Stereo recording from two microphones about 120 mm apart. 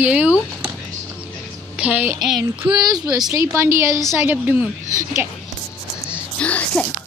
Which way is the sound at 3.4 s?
20° right (ahead or behind).